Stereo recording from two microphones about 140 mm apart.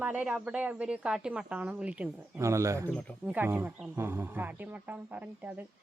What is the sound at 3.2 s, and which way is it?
A woman's voice, 10° right (ahead or behind).